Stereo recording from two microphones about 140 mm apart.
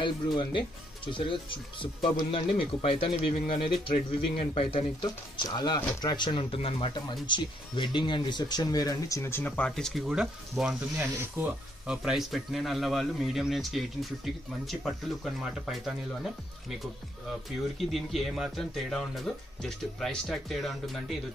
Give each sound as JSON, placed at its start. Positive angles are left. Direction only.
{"t": 0.0, "sound": "speech", "side_deg": 35}
{"t": 6.1, "sound": "speech", "side_deg": 35}
{"t": 17.7, "sound": "speech", "side_deg": 0}